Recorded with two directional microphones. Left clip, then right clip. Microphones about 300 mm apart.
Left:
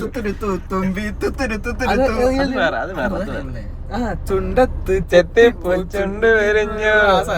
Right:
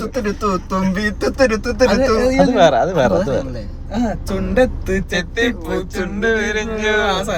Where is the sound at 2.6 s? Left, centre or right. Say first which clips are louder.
Right 7 dB; centre.